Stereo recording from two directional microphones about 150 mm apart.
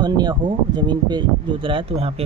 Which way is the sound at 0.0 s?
30° right (ahead or behind).